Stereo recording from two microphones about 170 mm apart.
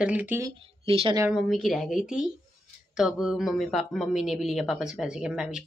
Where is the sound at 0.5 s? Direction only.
30° right (ahead or behind).